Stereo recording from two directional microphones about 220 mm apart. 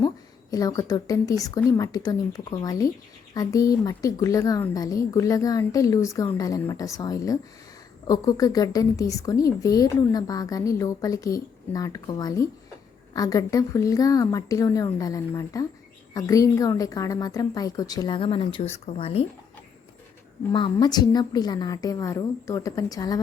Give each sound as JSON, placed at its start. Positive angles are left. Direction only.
{"t": 0.5, "sound": "a woman's voice", "side_deg": 15}
{"t": 20.5, "sound": "a woman's voice", "side_deg": 20}